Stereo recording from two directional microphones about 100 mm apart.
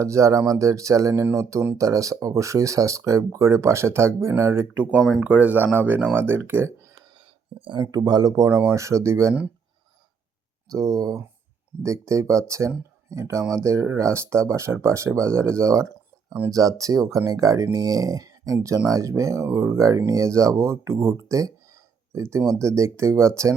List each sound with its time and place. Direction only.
0.0 s speech: 30° right (ahead or behind)
7.6 s speech: 45° right (ahead or behind); by 9.3 s 30° right (ahead or behind)
10.7 s speech: 35° right (ahead or behind)